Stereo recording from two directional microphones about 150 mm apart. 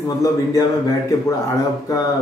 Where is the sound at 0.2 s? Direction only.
20° left (ahead or behind).